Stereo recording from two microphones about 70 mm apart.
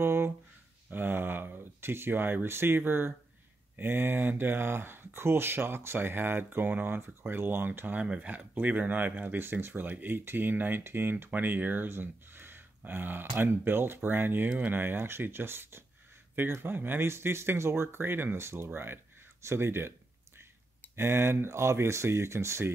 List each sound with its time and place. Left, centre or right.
0.0 s a sound: right
3.7 s speech: right
20.9 s speech: right